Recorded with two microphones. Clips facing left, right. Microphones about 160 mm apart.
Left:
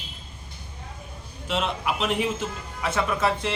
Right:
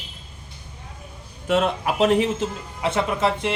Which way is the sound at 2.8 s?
25° right (ahead or behind).